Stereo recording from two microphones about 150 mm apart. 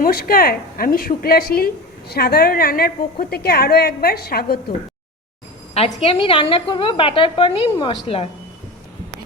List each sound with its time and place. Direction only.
0.0 s a woman's voice: 80° left
5.7 s a woman's voice: 40° left (ahead or behind)